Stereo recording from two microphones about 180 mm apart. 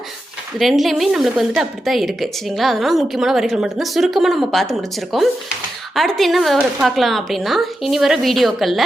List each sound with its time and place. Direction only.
0.6 s a woman's voice: centre (ahead or behind)